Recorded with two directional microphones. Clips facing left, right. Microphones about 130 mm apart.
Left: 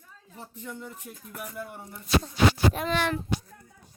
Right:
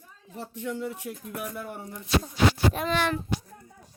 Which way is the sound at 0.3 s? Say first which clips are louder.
Right 7 dB; 80° right.